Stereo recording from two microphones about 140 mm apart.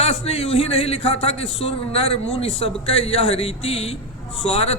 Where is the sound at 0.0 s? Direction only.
45° left (ahead or behind).